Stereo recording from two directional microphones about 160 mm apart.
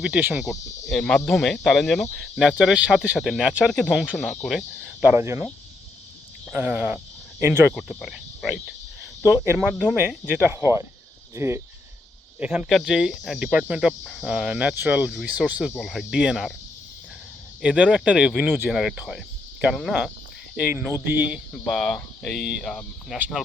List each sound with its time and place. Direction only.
0.0 s speech: 10° right (ahead or behind)
0.9 s speech: 5° left (ahead or behind)
5.1 s speech: 15° right (ahead or behind)
6.5 s speech: 10° right (ahead or behind)
17.6 s speech: 5° right (ahead or behind)
18.7 s speech: centre (ahead or behind)
21.5 s speech: centre (ahead or behind)
23.1 s speech: 10° right (ahead or behind)